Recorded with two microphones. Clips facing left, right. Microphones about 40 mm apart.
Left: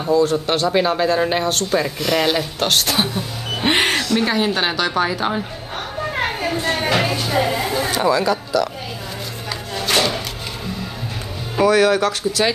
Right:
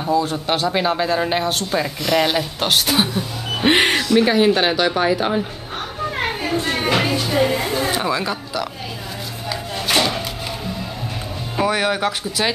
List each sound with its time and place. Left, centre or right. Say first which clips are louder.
0.0 s speech: left 3 dB; centre
6.7 s speech: even; centre
8.1 s speech: left 5 dB; centre
9.5 s a sound: even; centre
11.6 s speech: left 5 dB; centre